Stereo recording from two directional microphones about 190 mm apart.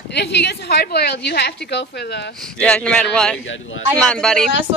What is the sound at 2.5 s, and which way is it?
Speech, 5° left (ahead or behind).